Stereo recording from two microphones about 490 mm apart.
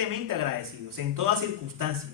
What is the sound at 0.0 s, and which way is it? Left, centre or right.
Speech, right.